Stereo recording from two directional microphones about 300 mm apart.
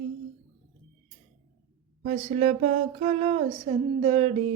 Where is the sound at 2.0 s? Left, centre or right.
Right.